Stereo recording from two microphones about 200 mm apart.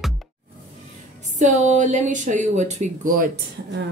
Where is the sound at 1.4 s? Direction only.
35° right (ahead or behind).